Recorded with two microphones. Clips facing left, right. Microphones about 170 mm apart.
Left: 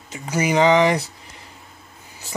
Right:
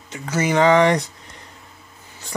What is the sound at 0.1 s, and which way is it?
Speech, 10° left (ahead or behind).